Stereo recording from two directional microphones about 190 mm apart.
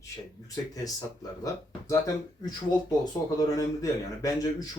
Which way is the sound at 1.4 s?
15° left (ahead or behind).